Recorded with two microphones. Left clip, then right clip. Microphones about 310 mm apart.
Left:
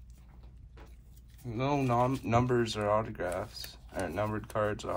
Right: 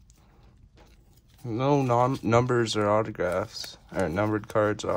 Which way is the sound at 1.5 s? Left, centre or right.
Right.